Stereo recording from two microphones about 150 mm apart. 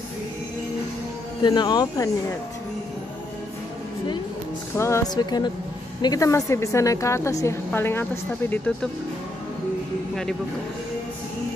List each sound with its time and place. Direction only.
1.4 s a woman's voice: 30° left (ahead or behind)
4.7 s a woman's voice: 20° left (ahead or behind)